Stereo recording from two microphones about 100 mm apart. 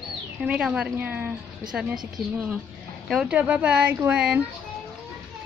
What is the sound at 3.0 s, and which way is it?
Speech, 5° right (ahead or behind).